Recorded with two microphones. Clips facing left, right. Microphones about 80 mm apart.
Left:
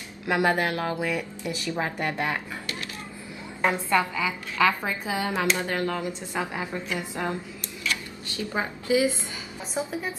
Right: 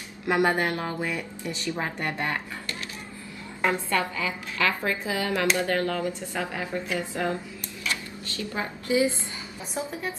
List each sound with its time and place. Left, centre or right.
0.4 s music: centre
1.4 s speech: centre
3.6 s a woman's voice: centre
9.8 s speech: centre